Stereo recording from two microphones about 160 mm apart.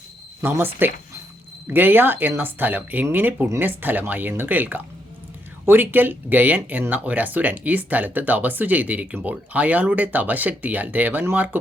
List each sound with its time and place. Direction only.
0.4 s speech: 15° right (ahead or behind)